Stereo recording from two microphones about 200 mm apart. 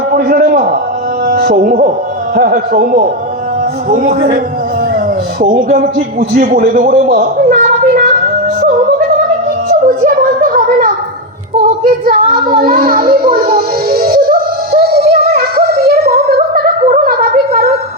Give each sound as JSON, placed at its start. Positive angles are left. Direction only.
{"t": 0.1, "sound": "a man's voice", "side_deg": -45}
{"t": 5.4, "sound": "a man's voice", "side_deg": -40}
{"t": 9.6, "sound": "music", "side_deg": -40}